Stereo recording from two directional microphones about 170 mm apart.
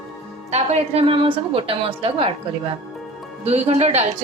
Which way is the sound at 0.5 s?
40° right (ahead or behind).